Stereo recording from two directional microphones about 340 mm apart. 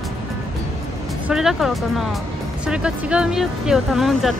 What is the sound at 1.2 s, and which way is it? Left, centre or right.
Speech, centre.